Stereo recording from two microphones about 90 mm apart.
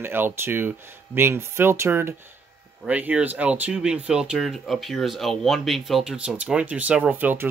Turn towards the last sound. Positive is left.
turn(degrees=-25)  # may be behind; listen again after turning